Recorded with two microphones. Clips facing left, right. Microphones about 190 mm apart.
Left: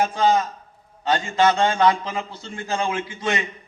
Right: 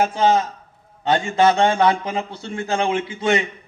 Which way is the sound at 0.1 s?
20° right (ahead or behind).